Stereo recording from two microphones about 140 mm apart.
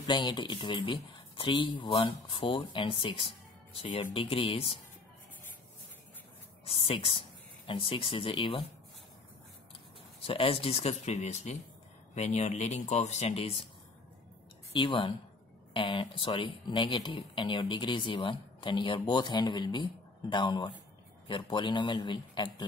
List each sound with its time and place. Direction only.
0.0 s speech: 35° left (ahead or behind)
6.6 s speech: 40° left (ahead or behind)
10.2 s speech: 40° left (ahead or behind)
14.7 s speech: 35° left (ahead or behind)